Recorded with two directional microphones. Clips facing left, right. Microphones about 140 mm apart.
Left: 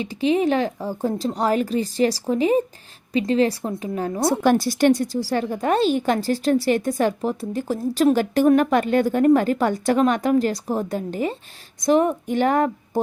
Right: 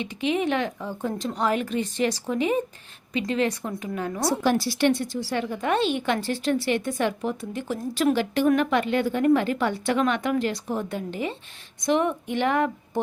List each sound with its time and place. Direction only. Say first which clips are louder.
0.0 s a woman's voice: left 5 dB; 35° left (ahead or behind)
4.3 s a woman's voice: left 5 dB; 50° left (ahead or behind)